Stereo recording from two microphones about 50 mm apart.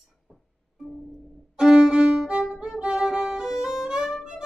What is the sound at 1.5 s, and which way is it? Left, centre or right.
Violin, centre.